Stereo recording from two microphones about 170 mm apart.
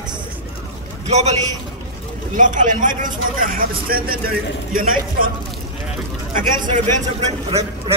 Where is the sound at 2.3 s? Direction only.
50° right (ahead or behind).